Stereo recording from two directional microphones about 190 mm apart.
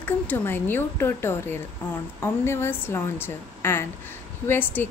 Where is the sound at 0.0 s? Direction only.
10° left (ahead or behind).